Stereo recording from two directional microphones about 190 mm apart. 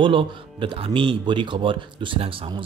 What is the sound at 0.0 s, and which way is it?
Speech, 25° right (ahead or behind).